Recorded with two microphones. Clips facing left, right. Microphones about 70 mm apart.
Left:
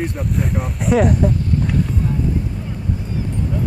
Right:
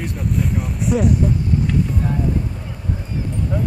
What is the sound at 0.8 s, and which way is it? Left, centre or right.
Speech, left.